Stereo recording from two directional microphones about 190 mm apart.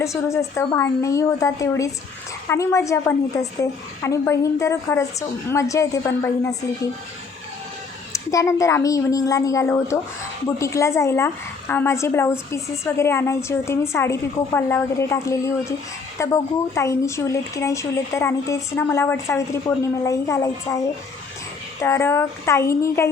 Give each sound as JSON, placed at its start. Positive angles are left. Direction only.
{"t": 0.0, "sound": "speech", "side_deg": 15}
{"t": 8.1, "sound": "speech", "side_deg": 15}
{"t": 21.8, "sound": "speech", "side_deg": 15}